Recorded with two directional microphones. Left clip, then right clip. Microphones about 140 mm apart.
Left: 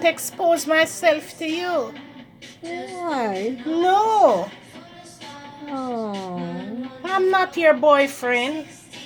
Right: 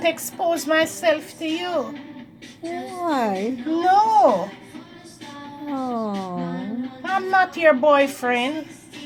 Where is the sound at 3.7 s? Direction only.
25° left (ahead or behind).